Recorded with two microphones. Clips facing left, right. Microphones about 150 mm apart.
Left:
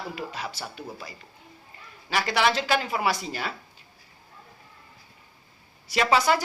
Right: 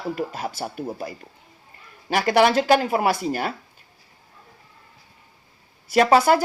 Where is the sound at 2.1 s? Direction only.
50° right (ahead or behind).